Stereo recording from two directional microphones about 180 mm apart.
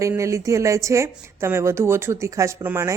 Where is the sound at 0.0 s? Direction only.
15° right (ahead or behind).